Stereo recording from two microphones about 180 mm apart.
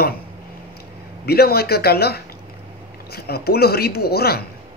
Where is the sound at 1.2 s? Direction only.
60° left (ahead or behind).